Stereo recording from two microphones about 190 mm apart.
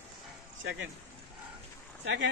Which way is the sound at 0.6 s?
90° right.